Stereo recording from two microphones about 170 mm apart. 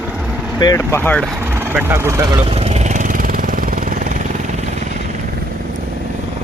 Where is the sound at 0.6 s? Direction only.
20° left (ahead or behind).